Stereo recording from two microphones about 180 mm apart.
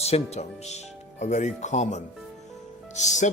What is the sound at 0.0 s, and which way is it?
Speech, 35° left (ahead or behind).